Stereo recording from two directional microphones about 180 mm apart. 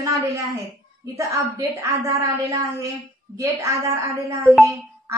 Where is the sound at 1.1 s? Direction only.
15° right (ahead or behind).